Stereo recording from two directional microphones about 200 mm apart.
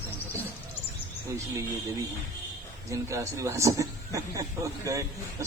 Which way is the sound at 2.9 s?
15° right (ahead or behind).